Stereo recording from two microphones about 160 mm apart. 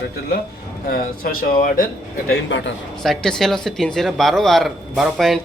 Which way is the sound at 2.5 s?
90° left.